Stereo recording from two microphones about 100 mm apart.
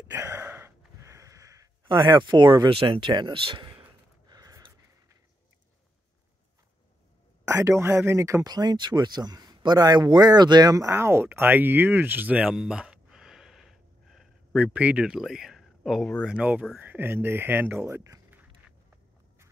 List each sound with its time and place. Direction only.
0.1 s gasp: 30° right (ahead or behind)
0.4 s a sound: 20° right (ahead or behind)
1.9 s speech: 55° right (ahead or behind)
2.7 s speech: 65° right (ahead or behind)
4.3 s a sound: 35° right (ahead or behind)
7.4 s speech: 30° right (ahead or behind)
8.5 s speech: 45° right (ahead or behind)
11.0 s speech: 25° right (ahead or behind)
12.5 s a sound: 10° right (ahead or behind)
14.7 s speech: 15° right (ahead or behind)
16.3 s speech: 10° right (ahead or behind)